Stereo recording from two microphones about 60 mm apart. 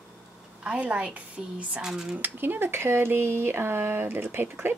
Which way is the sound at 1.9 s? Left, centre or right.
Centre.